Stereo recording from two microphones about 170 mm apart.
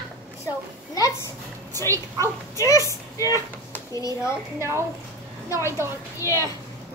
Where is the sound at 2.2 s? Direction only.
20° left (ahead or behind).